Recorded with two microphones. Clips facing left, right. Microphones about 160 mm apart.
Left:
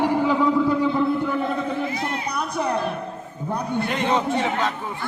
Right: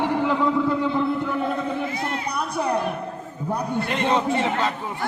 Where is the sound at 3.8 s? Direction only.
Centre (ahead or behind).